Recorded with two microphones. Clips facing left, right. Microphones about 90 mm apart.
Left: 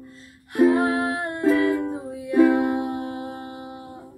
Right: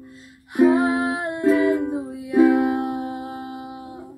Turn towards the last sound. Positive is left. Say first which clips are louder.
# right 2 dB
turn(degrees=-5)  # may be behind; listen again after turning